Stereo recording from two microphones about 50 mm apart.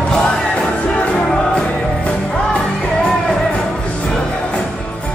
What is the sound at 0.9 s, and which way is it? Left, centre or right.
Music, left.